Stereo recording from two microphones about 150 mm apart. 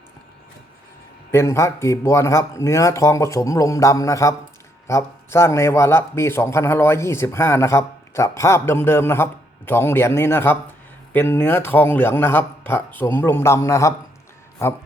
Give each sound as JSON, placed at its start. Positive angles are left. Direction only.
{"t": 1.3, "sound": "a man's voice", "side_deg": 20}